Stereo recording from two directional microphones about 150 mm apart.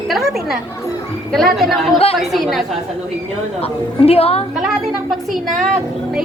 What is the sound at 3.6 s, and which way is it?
Speech, 40° left (ahead or behind).